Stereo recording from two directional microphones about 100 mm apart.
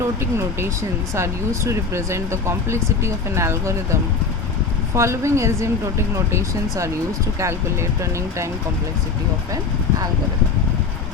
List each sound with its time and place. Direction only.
1.1 s speech: 30° right (ahead or behind)
4.9 s speech: 30° right (ahead or behind)